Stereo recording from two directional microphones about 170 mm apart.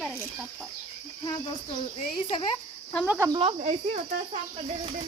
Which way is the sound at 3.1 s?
15° right (ahead or behind).